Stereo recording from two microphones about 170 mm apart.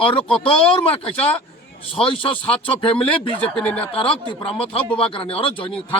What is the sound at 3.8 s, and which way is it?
Speech, 30° left (ahead or behind).